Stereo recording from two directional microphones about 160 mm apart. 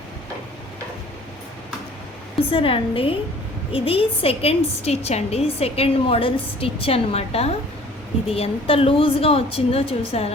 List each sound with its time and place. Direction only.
2.5 s a woman's voice: 35° left (ahead or behind)